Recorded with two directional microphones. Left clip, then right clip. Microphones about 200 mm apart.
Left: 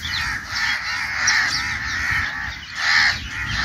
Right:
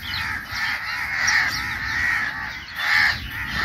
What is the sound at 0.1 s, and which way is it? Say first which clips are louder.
Goose: left 1 dB; 20° right (ahead or behind).